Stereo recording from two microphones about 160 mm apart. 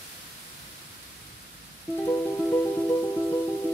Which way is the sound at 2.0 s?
15° left (ahead or behind).